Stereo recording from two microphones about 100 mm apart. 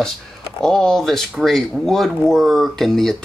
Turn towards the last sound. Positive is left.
turn(degrees=5)  # may be behind; listen again after turning